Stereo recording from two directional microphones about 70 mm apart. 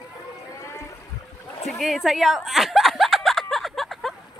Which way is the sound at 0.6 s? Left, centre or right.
Left.